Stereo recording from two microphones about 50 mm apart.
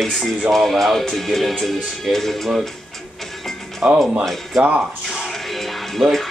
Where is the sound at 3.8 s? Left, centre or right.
Centre.